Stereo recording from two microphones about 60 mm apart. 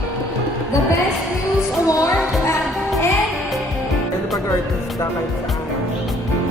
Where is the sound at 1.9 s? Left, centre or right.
Left.